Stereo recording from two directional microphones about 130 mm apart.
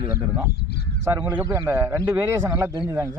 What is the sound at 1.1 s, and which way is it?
A man's voice, 15° right (ahead or behind).